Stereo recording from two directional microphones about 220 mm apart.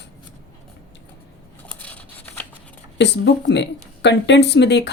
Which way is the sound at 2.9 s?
50° left (ahead or behind).